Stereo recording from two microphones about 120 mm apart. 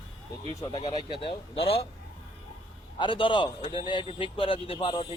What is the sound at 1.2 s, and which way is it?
Speech, 50° left (ahead or behind).